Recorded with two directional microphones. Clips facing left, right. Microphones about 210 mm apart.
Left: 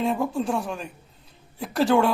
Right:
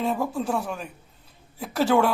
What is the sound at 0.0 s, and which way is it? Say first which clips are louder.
Speech: left 2 dB; centre (ahead or behind).